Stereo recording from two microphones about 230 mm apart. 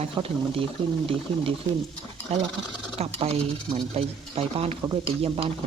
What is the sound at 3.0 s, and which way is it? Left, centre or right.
Speech, right.